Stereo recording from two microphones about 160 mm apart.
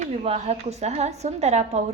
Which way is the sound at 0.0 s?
45° right (ahead or behind).